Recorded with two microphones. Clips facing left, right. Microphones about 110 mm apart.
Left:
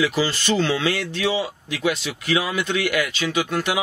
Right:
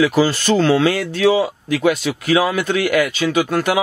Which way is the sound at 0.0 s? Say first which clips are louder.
Right 6 dB; 45° right (ahead or behind).